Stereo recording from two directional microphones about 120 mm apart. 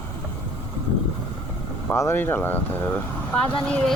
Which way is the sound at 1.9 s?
20° left (ahead or behind).